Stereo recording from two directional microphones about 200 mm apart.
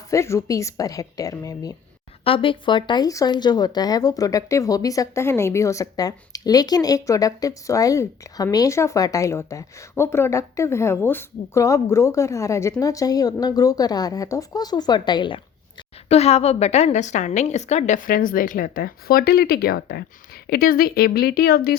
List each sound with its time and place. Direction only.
0.1 s a woman's voice: 15° left (ahead or behind); by 21.8 s 50° left (ahead or behind)